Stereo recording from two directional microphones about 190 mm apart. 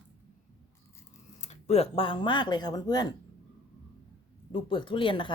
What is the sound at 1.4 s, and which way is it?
Speech, 35° left (ahead or behind).